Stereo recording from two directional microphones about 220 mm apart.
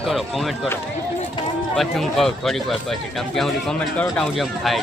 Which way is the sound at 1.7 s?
Centre (ahead or behind).